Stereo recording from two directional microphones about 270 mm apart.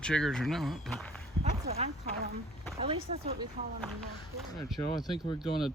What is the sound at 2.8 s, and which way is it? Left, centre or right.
Speech, right.